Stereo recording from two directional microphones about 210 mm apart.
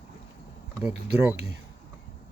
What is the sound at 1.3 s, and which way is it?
Speech, 55° right (ahead or behind).